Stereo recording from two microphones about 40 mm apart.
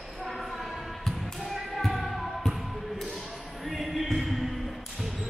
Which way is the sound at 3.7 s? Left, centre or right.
Centre.